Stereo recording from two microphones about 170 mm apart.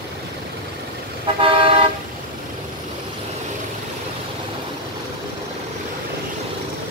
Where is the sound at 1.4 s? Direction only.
30° right (ahead or behind).